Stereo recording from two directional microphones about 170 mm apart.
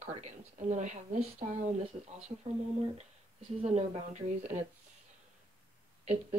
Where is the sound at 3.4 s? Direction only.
40° right (ahead or behind).